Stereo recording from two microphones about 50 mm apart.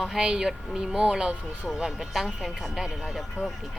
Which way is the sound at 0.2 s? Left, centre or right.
Centre.